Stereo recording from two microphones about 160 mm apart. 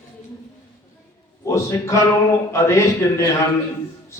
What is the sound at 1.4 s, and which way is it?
A man's voice, 20° left (ahead or behind).